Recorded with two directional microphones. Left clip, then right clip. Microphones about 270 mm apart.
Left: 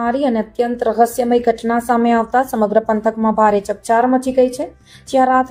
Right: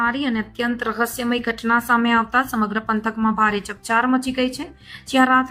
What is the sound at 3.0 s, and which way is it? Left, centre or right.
Speech, left.